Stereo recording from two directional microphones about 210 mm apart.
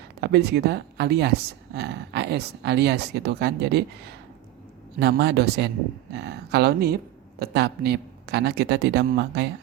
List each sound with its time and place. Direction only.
0.2 s speech: 50° right (ahead or behind)
4.9 s speech: 50° right (ahead or behind)